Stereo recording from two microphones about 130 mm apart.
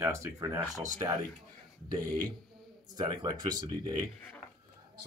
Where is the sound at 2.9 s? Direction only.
35° right (ahead or behind).